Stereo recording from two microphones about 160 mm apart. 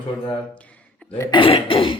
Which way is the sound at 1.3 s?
35° left (ahead or behind).